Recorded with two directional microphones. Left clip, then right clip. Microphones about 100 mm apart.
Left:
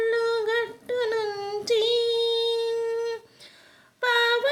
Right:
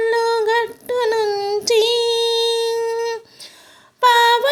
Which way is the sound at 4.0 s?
40° right (ahead or behind).